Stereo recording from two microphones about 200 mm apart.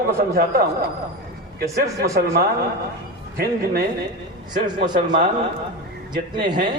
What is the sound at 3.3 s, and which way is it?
Speech, 50° right (ahead or behind).